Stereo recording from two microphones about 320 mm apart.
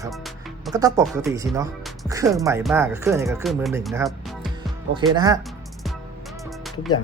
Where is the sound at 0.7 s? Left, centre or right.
Centre.